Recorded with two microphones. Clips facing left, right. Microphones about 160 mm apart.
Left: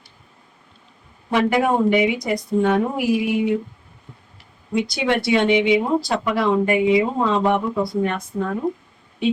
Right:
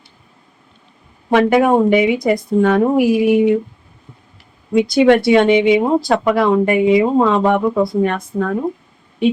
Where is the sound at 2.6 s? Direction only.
85° right.